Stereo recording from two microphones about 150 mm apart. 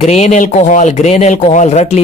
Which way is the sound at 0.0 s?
50° left (ahead or behind).